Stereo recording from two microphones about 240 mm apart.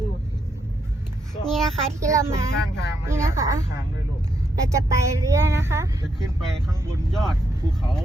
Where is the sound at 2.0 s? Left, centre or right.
Centre.